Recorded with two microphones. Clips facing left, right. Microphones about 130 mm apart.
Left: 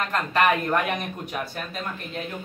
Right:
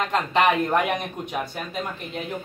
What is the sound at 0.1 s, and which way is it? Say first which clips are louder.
Speech: right 1 dB; 20° right (ahead or behind).